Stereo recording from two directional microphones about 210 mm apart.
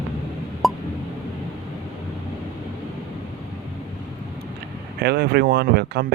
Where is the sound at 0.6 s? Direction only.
Centre (ahead or behind).